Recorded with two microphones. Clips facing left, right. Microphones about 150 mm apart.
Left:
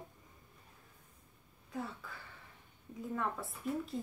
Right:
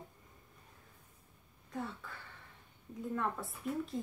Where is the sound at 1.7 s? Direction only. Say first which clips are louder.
Right 1 dB; centre (ahead or behind).